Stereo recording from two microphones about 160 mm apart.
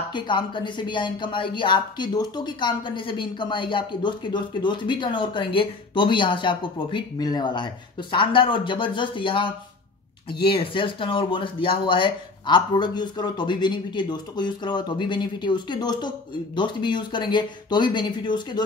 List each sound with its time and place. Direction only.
0.1 s speech: 30° left (ahead or behind)